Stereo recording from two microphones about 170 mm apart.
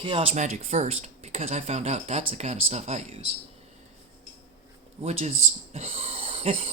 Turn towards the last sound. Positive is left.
turn(degrees=-40)  # may be behind; listen again after turning